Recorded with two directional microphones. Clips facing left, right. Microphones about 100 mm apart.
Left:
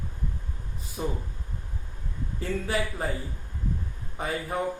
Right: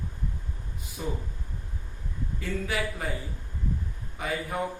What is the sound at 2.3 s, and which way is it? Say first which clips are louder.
Speech: left 2 dB; 30° left (ahead or behind).